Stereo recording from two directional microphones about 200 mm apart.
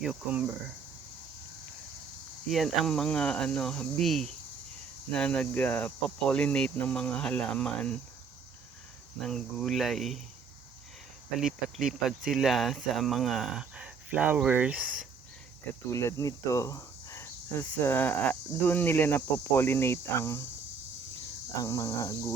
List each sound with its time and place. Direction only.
0.0 s speech: 5° right (ahead or behind)
2.5 s speech: centre (ahead or behind)
9.2 s speech: centre (ahead or behind)
11.3 s speech: centre (ahead or behind)
15.9 s cricket: 15° left (ahead or behind)
21.6 s cricket: 15° left (ahead or behind)